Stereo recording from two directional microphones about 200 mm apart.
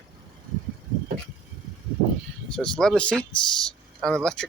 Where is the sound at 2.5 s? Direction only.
5° left (ahead or behind).